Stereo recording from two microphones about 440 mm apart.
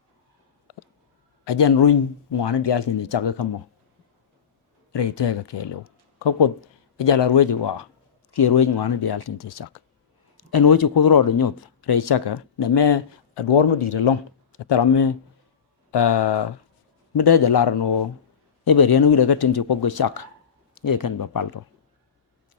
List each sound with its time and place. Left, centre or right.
0.7 s a sound: left
1.5 s speech: left
4.9 s speech: left